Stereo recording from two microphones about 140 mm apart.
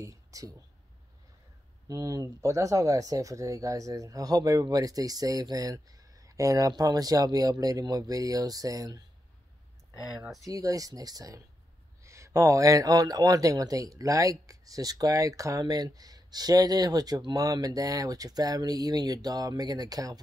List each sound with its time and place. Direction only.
0.0 s speech: 25° right (ahead or behind)
1.9 s speech: 25° right (ahead or behind)
10.1 s speech: 5° right (ahead or behind)
10.4 s speech: 25° right (ahead or behind)